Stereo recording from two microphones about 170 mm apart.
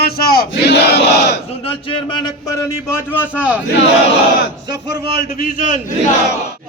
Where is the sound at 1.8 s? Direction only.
20° left (ahead or behind).